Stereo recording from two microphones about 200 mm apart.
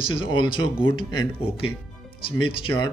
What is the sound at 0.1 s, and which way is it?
Speech, 25° left (ahead or behind).